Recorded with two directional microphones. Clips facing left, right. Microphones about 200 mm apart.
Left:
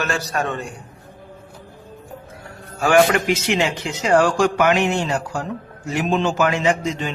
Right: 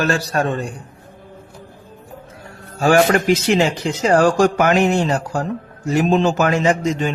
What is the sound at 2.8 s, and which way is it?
Speech, 35° right (ahead or behind).